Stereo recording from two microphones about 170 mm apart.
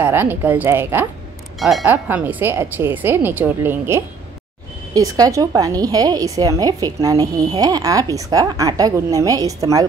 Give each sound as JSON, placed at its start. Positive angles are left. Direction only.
{"t": 0.0, "sound": "speech", "side_deg": -10}
{"t": 1.6, "sound": "a woman's voice", "side_deg": 0}